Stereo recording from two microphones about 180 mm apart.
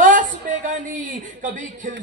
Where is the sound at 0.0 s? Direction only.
45° right (ahead or behind).